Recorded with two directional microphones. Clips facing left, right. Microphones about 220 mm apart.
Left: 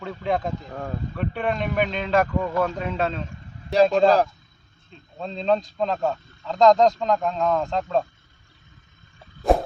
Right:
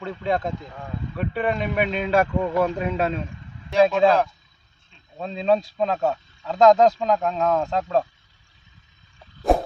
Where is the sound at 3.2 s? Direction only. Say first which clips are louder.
Left 4 dB; 40° left (ahead or behind).